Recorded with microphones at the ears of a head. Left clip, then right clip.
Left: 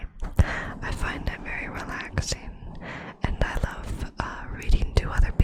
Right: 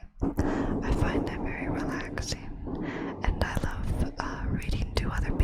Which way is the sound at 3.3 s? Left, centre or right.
Centre.